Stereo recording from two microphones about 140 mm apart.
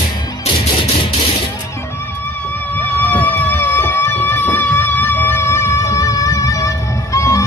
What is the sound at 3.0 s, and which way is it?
Music, 10° left (ahead or behind).